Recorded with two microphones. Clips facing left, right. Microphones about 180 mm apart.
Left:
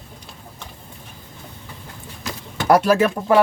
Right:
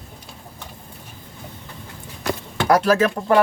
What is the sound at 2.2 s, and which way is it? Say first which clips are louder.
Clip-clop: right 5 dB; 60° right (ahead or behind).